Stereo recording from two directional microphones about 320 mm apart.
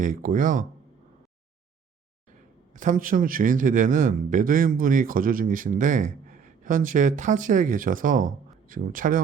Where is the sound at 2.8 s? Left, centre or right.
Right.